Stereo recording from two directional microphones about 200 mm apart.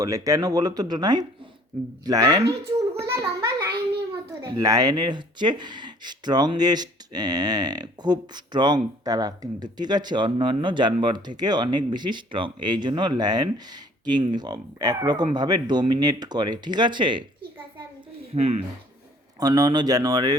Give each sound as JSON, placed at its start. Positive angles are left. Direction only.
{"t": 0.0, "sound": "speech", "side_deg": -15}
{"t": 3.2, "sound": "a sound", "side_deg": -15}
{"t": 4.4, "sound": "speech", "side_deg": -20}
{"t": 18.3, "sound": "speech", "side_deg": -30}
{"t": 19.4, "sound": "speech", "side_deg": -20}